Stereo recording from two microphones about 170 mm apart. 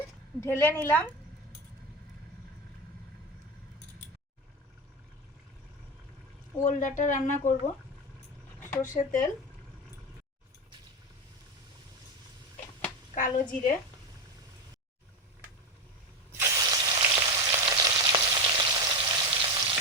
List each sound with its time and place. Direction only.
0.3 s a woman's voice: 15° left (ahead or behind)
6.7 s speech: 50° left (ahead or behind)
8.7 s speech: 50° left (ahead or behind)
13.1 s speech: 50° left (ahead or behind)
16.4 s frying: 20° right (ahead or behind)